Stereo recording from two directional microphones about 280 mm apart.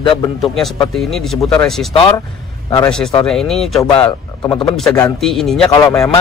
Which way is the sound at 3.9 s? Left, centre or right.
Centre.